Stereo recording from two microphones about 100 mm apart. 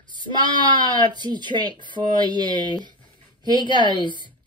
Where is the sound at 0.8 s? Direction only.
45° right (ahead or behind).